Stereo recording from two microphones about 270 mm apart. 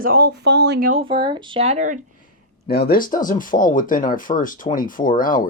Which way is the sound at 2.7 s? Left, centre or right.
Left.